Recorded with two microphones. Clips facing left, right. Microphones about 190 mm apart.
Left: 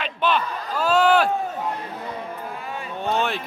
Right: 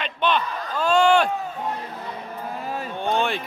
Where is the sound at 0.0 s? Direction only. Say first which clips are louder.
Even; 5° left (ahead or behind).